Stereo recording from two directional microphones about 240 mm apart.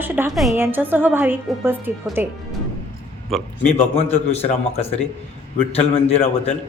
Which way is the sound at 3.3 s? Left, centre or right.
Centre.